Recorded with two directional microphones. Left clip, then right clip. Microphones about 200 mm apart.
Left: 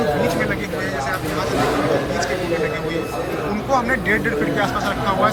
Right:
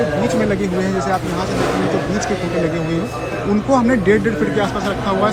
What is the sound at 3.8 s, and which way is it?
A man's voice, 15° right (ahead or behind).